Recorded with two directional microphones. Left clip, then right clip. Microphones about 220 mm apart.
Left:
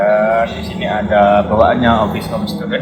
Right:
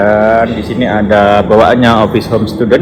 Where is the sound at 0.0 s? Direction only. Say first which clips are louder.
Right 4 dB; 45° right (ahead or behind).